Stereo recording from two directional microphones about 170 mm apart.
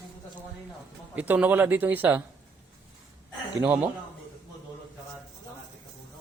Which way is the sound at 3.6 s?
10° right (ahead or behind).